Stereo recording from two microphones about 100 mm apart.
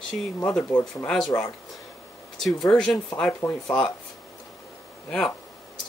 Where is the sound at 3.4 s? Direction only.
20° left (ahead or behind).